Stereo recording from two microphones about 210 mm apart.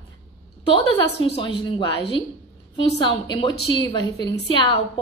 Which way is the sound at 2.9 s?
25° left (ahead or behind).